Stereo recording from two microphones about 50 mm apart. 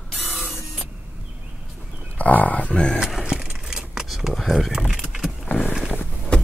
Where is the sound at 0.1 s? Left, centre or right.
Centre.